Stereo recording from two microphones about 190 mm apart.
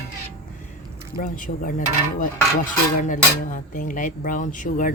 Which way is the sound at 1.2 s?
45° left (ahead or behind).